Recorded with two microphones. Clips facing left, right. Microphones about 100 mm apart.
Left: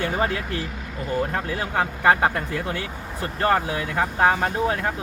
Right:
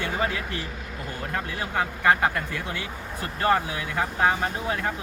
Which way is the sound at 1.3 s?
35° left (ahead or behind).